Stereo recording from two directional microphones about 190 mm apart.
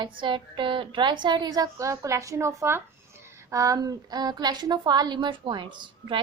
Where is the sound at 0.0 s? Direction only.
25° right (ahead or behind).